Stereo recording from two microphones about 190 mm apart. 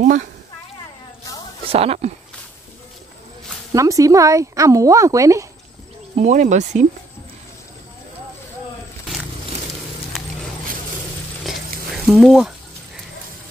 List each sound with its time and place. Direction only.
1.7 s cricket: 30° right (ahead or behind)
3.7 s speech: 15° right (ahead or behind)
6.1 s cricket: 40° right (ahead or behind)
11.4 s a sound: centre (ahead or behind)